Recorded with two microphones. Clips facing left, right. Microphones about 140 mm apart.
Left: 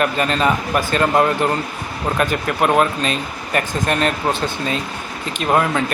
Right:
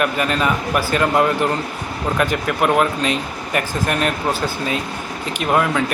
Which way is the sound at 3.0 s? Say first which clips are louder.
Right 1 dB; 15° right (ahead or behind).